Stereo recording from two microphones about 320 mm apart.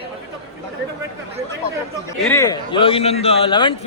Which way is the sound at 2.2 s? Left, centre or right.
Centre.